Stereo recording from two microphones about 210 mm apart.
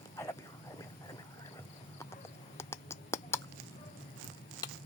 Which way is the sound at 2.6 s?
10° left (ahead or behind).